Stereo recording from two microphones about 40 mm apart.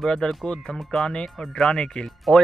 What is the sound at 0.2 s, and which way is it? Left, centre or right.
Speech, left.